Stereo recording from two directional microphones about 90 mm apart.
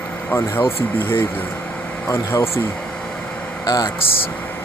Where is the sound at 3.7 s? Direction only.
45° left (ahead or behind).